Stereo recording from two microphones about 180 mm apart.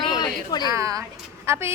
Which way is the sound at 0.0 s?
20° left (ahead or behind).